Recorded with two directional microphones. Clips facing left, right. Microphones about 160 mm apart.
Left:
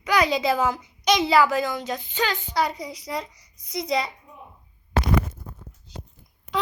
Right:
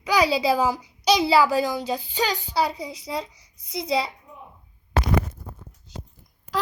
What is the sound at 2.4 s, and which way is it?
A child's voice, 30° right (ahead or behind).